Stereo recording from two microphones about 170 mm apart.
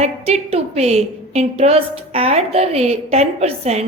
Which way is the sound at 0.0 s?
40° right (ahead or behind).